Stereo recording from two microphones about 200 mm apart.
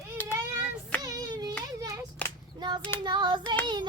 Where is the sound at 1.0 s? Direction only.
20° right (ahead or behind).